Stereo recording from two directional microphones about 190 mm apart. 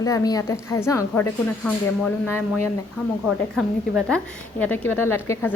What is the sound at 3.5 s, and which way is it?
A woman's voice, centre (ahead or behind).